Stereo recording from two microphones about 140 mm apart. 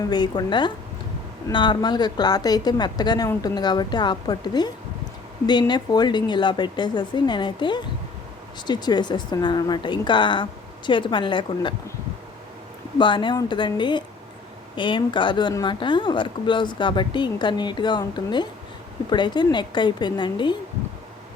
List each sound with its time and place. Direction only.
0.1 s a woman's voice: 30° left (ahead or behind)
13.0 s a woman's voice: 35° left (ahead or behind)